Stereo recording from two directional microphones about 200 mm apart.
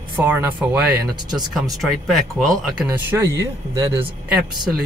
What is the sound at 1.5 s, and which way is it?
Speech, centre (ahead or behind).